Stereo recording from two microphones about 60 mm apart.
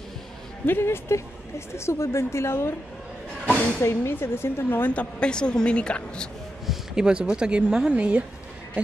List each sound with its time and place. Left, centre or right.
0.7 s speech: left
3.8 s speech: left
4.9 s a woman's voice: centre
6.6 s a sound: centre
7.1 s speech: centre